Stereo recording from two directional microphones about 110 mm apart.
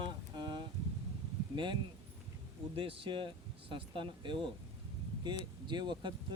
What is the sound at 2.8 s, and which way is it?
Speech, 55° right (ahead or behind).